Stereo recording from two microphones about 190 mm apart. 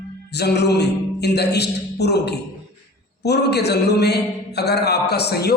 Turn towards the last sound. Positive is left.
turn(degrees=55)  # may be behind; listen again after turning